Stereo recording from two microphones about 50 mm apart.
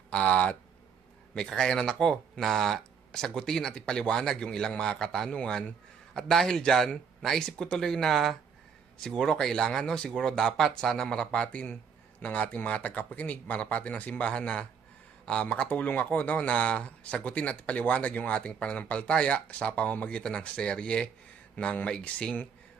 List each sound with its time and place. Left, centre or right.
0.1 s speech: left
1.4 s speech: centre